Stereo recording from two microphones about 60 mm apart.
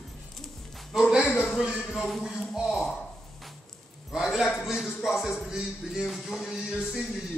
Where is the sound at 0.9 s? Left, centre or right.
Centre.